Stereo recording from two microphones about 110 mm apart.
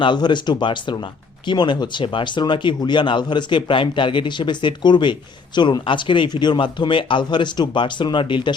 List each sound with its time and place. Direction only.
0.0 s speech: 45° left (ahead or behind)